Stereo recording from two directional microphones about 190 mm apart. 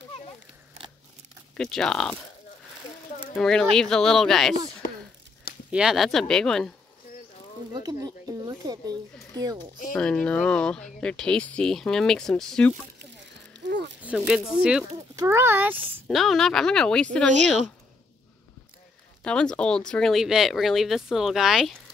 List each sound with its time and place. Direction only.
1.5 s speech: 5° left (ahead or behind)
3.3 s speech: 5° left (ahead or behind)
5.7 s speech: 5° right (ahead or behind)
7.7 s a sound: 20° right (ahead or behind)
9.4 s speech: 20° right (ahead or behind)
9.9 s speech: 5° left (ahead or behind)
13.7 s a sound: 65° right (ahead or behind)
14.0 s speech: 5° right (ahead or behind)
19.2 s speech: 5° left (ahead or behind)